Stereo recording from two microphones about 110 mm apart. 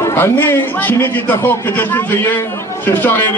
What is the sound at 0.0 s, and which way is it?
A man's voice, 20° left (ahead or behind).